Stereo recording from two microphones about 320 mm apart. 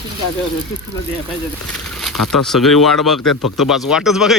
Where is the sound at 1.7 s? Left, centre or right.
Centre.